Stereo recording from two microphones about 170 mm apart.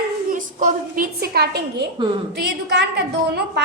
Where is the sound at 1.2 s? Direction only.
75° right (ahead or behind); by 2.9 s 90° right.